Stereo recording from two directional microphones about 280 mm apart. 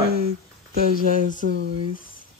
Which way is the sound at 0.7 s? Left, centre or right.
Right.